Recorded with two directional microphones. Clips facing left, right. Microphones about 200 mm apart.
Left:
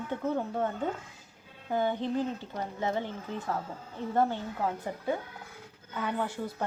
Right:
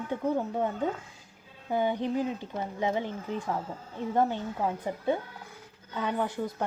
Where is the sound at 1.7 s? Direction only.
10° right (ahead or behind).